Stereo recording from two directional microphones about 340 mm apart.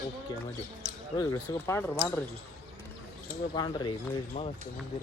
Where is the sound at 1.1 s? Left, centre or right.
Centre.